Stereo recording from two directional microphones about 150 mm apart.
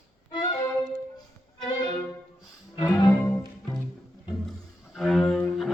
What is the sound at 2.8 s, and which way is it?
Music, 20° left (ahead or behind).